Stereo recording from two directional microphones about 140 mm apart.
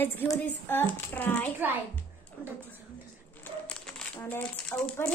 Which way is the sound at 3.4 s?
10° left (ahead or behind).